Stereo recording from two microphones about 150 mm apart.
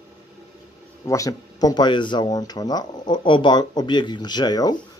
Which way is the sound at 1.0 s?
20° left (ahead or behind).